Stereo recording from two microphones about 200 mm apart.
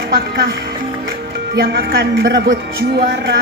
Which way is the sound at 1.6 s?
50° right (ahead or behind).